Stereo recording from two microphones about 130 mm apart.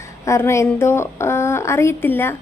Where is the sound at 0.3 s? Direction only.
20° left (ahead or behind).